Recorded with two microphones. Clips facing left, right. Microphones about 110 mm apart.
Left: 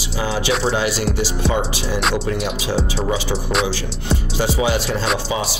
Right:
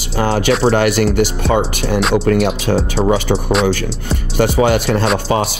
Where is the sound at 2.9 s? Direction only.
70° right (ahead or behind).